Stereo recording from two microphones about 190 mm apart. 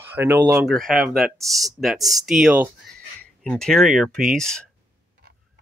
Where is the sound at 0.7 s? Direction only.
Centre (ahead or behind).